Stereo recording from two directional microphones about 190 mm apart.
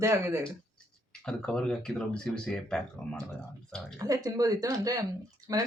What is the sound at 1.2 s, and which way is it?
Speech, 5° left (ahead or behind).